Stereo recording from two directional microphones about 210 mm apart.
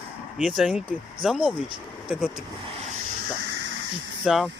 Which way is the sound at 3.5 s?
60° right (ahead or behind).